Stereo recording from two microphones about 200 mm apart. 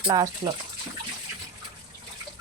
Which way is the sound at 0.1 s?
15° right (ahead or behind).